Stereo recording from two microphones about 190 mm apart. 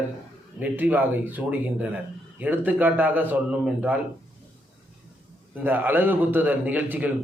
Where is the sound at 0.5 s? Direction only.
10° right (ahead or behind).